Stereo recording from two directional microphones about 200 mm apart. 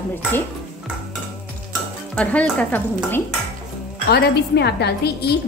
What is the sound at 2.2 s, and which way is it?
A woman's voice, 5° left (ahead or behind).